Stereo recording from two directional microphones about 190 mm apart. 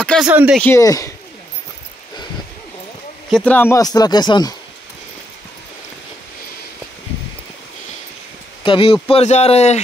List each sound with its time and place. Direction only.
0.0 s a sound: 5° left (ahead or behind)
0.3 s speech: 5° right (ahead or behind)
0.6 s speech: 15° left (ahead or behind)
3.3 s speech: 5° left (ahead or behind); by 4.6 s 20° left (ahead or behind)
8.6 s speech: 25° left (ahead or behind)